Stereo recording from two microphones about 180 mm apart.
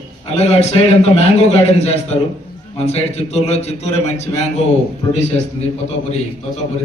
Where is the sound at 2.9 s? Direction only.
35° left (ahead or behind).